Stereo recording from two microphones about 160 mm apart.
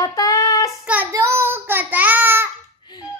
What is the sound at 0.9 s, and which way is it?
A child's voice, 15° right (ahead or behind).